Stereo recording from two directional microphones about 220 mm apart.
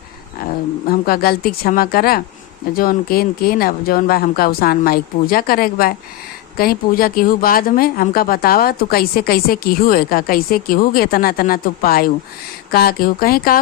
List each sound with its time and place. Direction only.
0.9 s speech: 45° left (ahead or behind)